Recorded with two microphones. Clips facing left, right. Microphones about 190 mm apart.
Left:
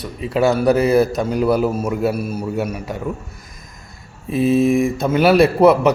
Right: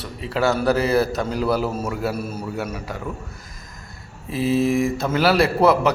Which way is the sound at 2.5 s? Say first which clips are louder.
Left 5 dB; 20° left (ahead or behind).